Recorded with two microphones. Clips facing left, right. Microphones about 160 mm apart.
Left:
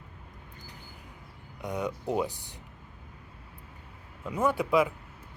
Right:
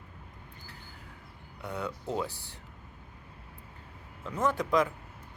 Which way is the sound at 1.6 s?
15° left (ahead or behind).